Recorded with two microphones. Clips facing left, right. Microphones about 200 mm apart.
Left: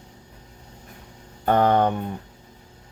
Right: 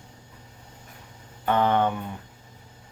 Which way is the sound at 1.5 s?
40° left (ahead or behind).